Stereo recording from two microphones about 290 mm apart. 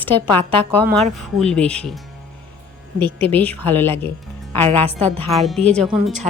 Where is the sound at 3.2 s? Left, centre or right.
Centre.